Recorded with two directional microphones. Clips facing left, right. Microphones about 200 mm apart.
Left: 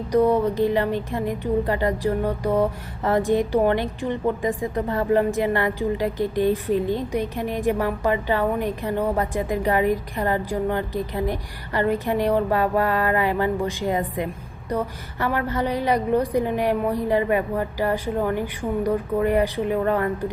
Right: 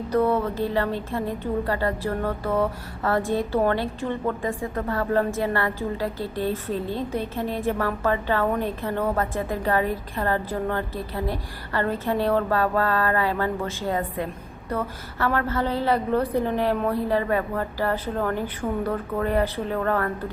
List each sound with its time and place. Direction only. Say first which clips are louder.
0.1 s a woman's voice: left 4 dB; 15° left (ahead or behind)